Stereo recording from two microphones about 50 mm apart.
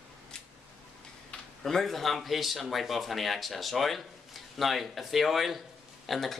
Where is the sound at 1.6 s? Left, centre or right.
Centre.